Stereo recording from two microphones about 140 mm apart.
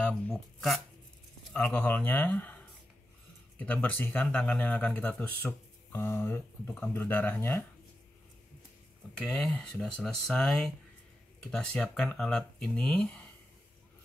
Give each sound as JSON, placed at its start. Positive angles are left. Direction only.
{"t": 0.0, "sound": "speech", "side_deg": 0}
{"t": 9.1, "sound": "speech", "side_deg": 5}